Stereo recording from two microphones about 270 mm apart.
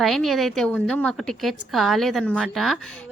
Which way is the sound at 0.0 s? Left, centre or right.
Centre.